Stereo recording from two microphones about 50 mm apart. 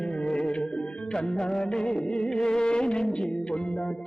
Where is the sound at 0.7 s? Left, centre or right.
Centre.